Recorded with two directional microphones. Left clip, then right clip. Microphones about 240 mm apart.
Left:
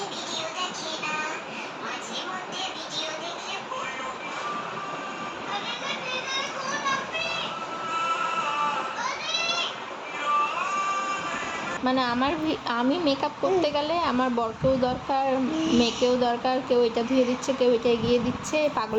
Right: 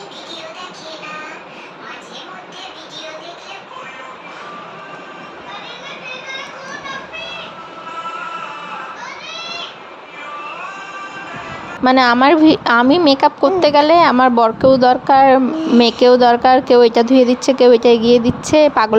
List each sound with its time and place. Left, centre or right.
11.9 s speech: right
15.5 s speech: centre
15.8 s speech: right